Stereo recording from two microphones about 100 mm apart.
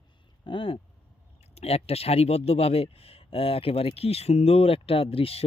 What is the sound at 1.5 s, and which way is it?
Speech, 90° left.